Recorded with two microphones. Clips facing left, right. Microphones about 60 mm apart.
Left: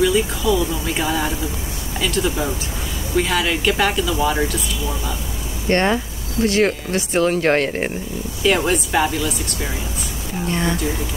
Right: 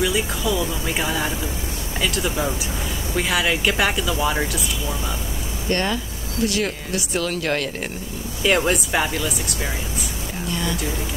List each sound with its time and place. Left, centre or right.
0.0 s speech: centre
5.7 s speech: left
8.5 s speech: centre
10.5 s speech: left